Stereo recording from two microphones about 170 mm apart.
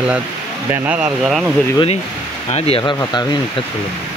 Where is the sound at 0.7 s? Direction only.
5° right (ahead or behind).